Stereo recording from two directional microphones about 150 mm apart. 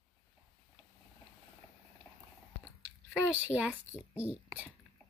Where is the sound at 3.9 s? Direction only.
15° left (ahead or behind).